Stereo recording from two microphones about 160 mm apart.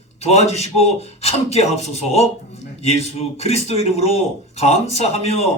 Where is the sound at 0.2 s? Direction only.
40° left (ahead or behind).